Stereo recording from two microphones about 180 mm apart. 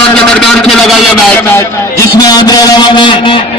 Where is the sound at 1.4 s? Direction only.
15° left (ahead or behind).